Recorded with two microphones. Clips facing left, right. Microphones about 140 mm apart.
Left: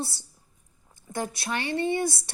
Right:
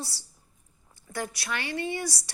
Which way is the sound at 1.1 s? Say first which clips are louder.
Left 3 dB; 20° left (ahead or behind).